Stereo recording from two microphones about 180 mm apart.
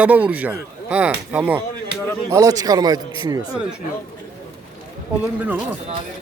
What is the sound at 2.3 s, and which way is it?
Speech, 20° right (ahead or behind).